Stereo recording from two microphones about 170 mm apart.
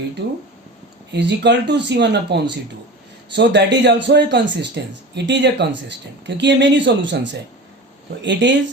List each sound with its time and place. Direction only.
0.2 s a man's voice: 80° right